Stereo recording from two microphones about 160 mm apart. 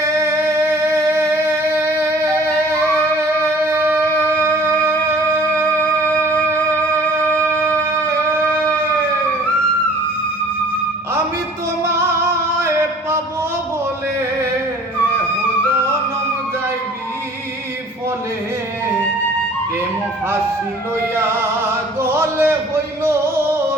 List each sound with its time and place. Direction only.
0.2 s music: 15° right (ahead or behind)
3.7 s wind instrument: 15° right (ahead or behind)
7.6 s music: 15° right (ahead or behind)
22.0 s a sound: 15° right (ahead or behind)